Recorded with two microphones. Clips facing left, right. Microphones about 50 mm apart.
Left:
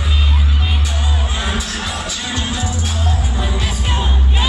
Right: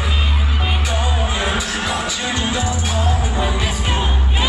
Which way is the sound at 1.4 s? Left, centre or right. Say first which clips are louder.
Right 2 dB; centre.